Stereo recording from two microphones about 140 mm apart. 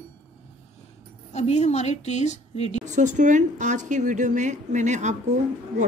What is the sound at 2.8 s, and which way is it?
A woman's voice, 60° right (ahead or behind).